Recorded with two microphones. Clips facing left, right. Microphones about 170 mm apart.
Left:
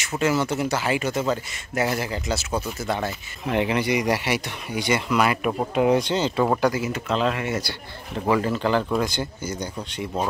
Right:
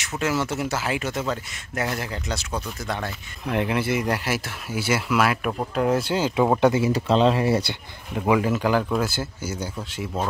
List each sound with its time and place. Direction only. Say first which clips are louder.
0.0 s speech: left 2 dB; centre (ahead or behind)
5.9 s speech: even; 10° right (ahead or behind)
6.6 s speech: right 4 dB; 25° right (ahead or behind)
8.3 s speech: right 1 dB; 10° right (ahead or behind)